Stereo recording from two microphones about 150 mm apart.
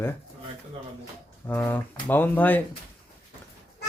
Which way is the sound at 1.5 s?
15° left (ahead or behind).